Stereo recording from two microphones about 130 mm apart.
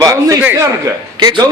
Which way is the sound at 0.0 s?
25° right (ahead or behind).